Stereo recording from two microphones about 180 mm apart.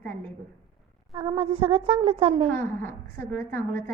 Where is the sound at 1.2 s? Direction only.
30° right (ahead or behind).